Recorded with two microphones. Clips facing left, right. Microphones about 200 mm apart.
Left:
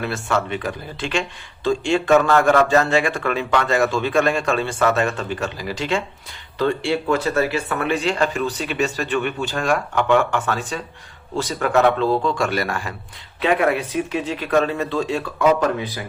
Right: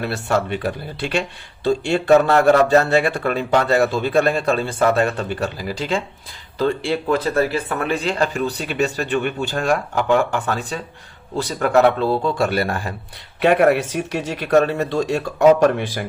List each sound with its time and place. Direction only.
0.0 s speech: 40° right (ahead or behind)
7.3 s speech: 30° right (ahead or behind)
13.4 s a man's voice: 45° right (ahead or behind)
13.8 s speech: 80° right
14.5 s a man's voice: 40° right (ahead or behind)